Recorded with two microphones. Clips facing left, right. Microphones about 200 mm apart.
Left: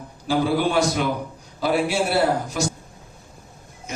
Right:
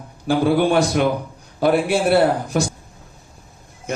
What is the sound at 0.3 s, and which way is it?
A man's voice, 55° right (ahead or behind).